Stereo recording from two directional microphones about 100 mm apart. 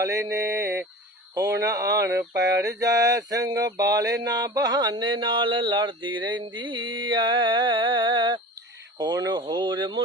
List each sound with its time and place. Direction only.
0.0 s mantra: 30° right (ahead or behind)
1.4 s a sound: 35° right (ahead or behind)
2.8 s mantra: 40° right (ahead or behind)
9.0 s mantra: 40° right (ahead or behind)